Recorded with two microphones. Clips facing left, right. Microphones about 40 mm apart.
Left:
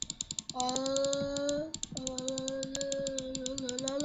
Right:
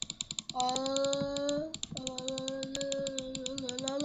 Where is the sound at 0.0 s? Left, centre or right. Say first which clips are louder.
Right 2 dB; right.